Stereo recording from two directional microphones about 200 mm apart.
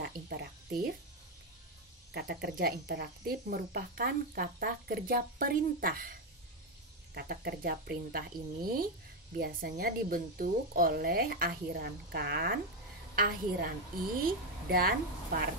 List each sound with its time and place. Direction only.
0.0 s a sound: 50° right (ahead or behind)
2.1 s speech: 50° right (ahead or behind)
7.2 s speech: 50° right (ahead or behind)